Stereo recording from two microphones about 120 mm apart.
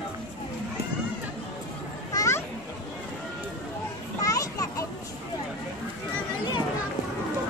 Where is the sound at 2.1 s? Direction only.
25° left (ahead or behind).